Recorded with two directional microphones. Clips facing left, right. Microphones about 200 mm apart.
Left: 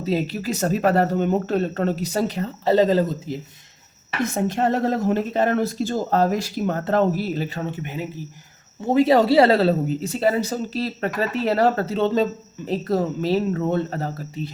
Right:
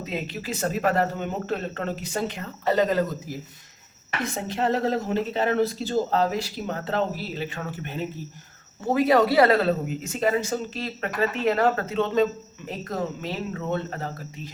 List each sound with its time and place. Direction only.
0.0 s speech: 35° left (ahead or behind)
4.5 s speech: 45° left (ahead or behind)
7.8 s speech: 15° left (ahead or behind)
8.9 s speech: 25° left (ahead or behind)